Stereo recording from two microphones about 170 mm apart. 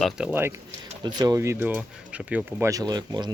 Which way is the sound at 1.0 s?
25° right (ahead or behind).